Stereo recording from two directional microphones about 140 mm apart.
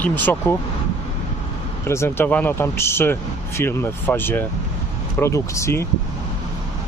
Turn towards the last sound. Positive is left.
turn(degrees=20)  # may be behind; listen again after turning